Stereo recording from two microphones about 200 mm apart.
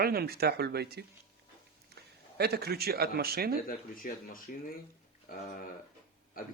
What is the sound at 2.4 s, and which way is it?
Speech, 50° right (ahead or behind).